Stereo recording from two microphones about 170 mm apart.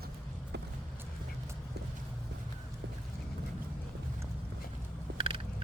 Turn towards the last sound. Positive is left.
turn(degrees=-35)  # may be behind; listen again after turning